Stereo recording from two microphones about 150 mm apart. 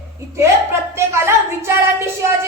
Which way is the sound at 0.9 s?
15° right (ahead or behind).